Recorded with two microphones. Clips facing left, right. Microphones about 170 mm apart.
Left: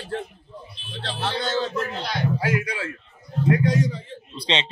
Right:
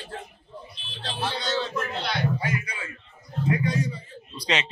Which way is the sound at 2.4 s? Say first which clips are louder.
Left 6 dB; 90° left.